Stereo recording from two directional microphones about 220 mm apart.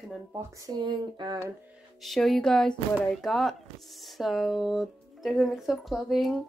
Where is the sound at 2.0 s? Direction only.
Centre (ahead or behind).